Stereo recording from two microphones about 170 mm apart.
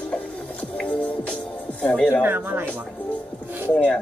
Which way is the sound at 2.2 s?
10° right (ahead or behind).